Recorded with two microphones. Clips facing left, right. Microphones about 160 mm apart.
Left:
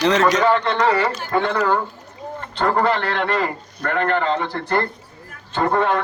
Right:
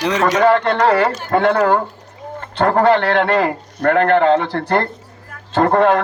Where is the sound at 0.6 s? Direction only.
65° right (ahead or behind).